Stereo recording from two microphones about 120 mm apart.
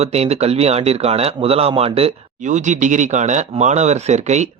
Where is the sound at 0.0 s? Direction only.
60° right (ahead or behind).